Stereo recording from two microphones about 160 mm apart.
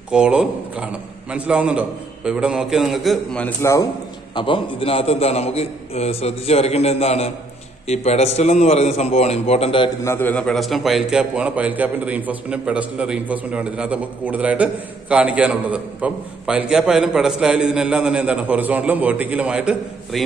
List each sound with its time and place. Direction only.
0.1 s a man's voice: 5° right (ahead or behind)
4.4 s a man's voice: 35° left (ahead or behind)
10.0 s a man's voice: 15° left (ahead or behind); by 20.2 s 5° right (ahead or behind)